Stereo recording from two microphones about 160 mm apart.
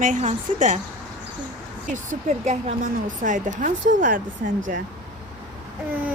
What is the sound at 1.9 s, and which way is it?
Speech, 50° right (ahead or behind).